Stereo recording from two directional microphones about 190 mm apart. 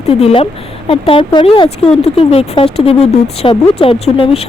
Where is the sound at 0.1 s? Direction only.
30° left (ahead or behind).